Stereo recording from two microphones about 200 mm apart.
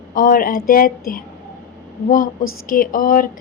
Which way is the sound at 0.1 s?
45° left (ahead or behind).